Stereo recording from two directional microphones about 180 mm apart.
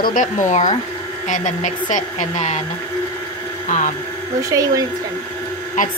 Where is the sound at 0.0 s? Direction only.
45° left (ahead or behind).